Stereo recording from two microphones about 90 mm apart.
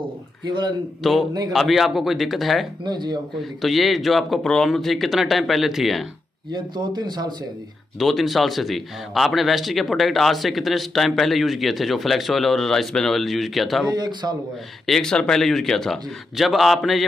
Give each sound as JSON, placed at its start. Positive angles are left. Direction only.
{"t": 0.5, "sound": "speech", "side_deg": -55}
{"t": 1.0, "sound": "a man's voice", "side_deg": 0}
{"t": 2.8, "sound": "speech", "side_deg": -55}
{"t": 3.3, "sound": "a man's voice", "side_deg": 0}
{"t": 6.5, "sound": "speech", "side_deg": -55}
{"t": 8.0, "sound": "a man's voice", "side_deg": 0}
{"t": 13.8, "sound": "speech", "side_deg": -50}
{"t": 14.9, "sound": "a man's voice", "side_deg": 5}